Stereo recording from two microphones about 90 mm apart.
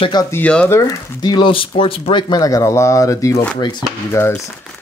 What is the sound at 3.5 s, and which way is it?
Speech, 55° left (ahead or behind).